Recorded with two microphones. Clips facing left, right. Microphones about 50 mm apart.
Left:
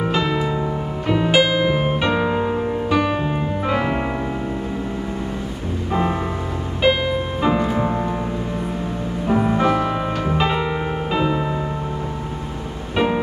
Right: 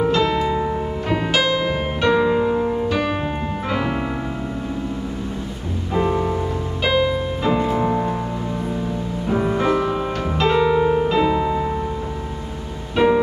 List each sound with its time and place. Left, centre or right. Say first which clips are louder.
0.0 s music: right 2 dB; centre
1.3 s music: left 3 dB; centre
3.6 s piano: left 2 dB; centre
5.9 s music: right 2 dB; left
6.8 s music: left 1 dB; centre
9.3 s music: left 1 dB; centre
10.6 s piano: right 7 dB; left
12.9 s music: right 4 dB; centre